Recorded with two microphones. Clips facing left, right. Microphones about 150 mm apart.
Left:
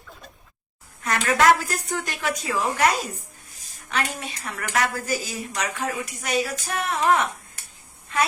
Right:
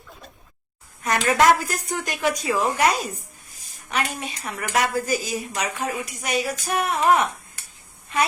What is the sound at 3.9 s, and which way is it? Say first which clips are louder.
Speech: right 1 dB; 15° right (ahead or behind).